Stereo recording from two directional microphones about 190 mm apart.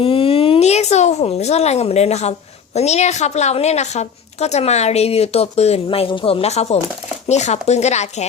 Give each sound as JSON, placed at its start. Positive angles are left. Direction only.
{"t": 0.0, "sound": "a woman's voice", "side_deg": 30}